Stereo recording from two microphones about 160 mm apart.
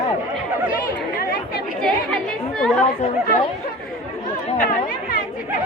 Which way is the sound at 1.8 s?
5° left (ahead or behind).